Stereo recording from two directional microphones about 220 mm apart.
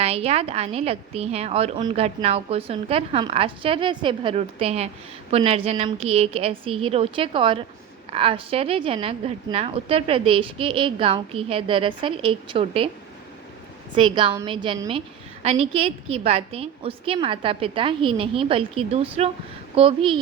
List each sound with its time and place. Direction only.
0.0 s a woman's voice: 30° right (ahead or behind)
13.9 s a woman's voice: 20° right (ahead or behind)